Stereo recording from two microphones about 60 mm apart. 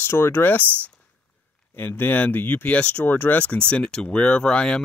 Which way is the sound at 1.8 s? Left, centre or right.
Left.